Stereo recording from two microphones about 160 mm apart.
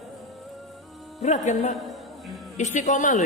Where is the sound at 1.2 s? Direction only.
50° left (ahead or behind).